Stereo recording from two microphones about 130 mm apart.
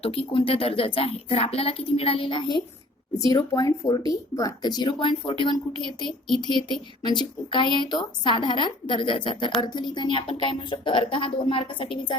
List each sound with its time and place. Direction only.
0.0 s a woman's voice: 45° left (ahead or behind); by 4.7 s 30° left (ahead or behind)
4.8 s a woman's voice: 40° left (ahead or behind)
6.1 s speech: centre (ahead or behind)
7.0 s a woman's voice: 35° left (ahead or behind)